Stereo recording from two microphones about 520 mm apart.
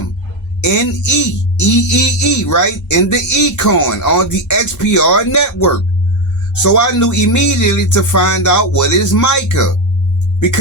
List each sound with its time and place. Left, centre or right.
0.6 s speech: left